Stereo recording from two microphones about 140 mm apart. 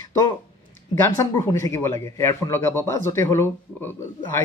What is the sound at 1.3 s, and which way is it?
A man's voice, 20° left (ahead or behind).